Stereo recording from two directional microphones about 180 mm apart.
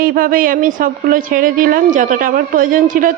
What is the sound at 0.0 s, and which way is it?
A woman's voice, 55° right (ahead or behind).